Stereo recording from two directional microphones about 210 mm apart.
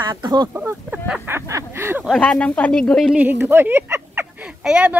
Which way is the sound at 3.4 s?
10° right (ahead or behind).